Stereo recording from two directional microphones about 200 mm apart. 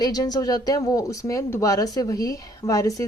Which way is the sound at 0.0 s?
20° left (ahead or behind).